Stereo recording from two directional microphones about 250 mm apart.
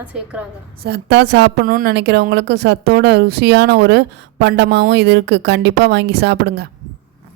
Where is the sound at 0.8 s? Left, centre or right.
Right.